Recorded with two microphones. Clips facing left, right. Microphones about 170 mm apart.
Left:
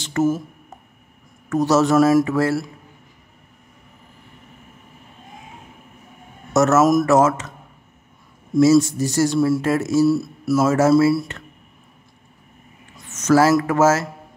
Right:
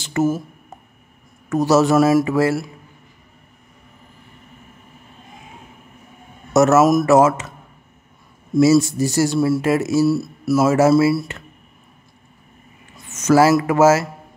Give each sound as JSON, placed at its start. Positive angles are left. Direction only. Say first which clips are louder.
{"t": 0.0, "sound": "a sound", "louder": "even", "side_deg": -5}
{"t": 1.5, "sound": "speech", "louder": "right 1 dB", "side_deg": -10}
{"t": 6.5, "sound": "speech", "louder": "right 2 dB", "side_deg": -10}
{"t": 8.5, "sound": "speech", "louder": "even", "side_deg": -10}
{"t": 12.9, "sound": "speech", "louder": "right 1 dB", "side_deg": -10}